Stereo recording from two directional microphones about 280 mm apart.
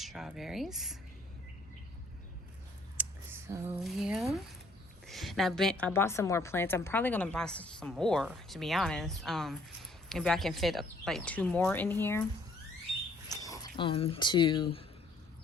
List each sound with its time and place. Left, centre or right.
0.0 s speech: centre
3.0 s a woman's voice: centre
13.2 s speech: centre